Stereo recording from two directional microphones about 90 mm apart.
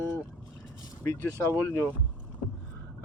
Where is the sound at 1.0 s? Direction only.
30° left (ahead or behind).